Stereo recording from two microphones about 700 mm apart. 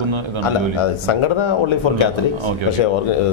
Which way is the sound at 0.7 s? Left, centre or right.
Left.